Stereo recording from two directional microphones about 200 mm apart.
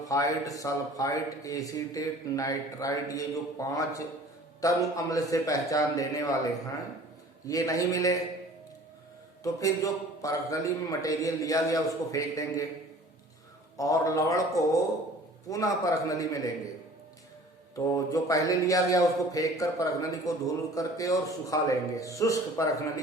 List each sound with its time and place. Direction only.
0.1 s a man's voice: 15° left (ahead or behind)
7.4 s a man's voice: 15° left (ahead or behind)
9.4 s a man's voice: 15° left (ahead or behind)
13.7 s a man's voice: 15° left (ahead or behind)
17.7 s a man's voice: 15° left (ahead or behind)